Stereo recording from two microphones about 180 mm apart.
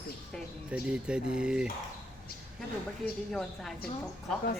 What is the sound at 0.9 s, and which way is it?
Speech, 5° right (ahead or behind).